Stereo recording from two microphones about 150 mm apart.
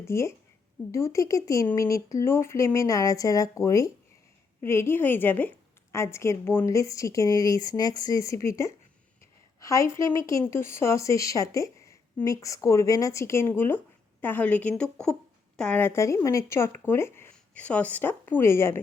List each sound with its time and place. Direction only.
0.0 s a woman's voice: 20° left (ahead or behind)